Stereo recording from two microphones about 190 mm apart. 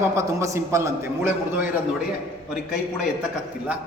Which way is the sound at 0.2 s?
15° right (ahead or behind).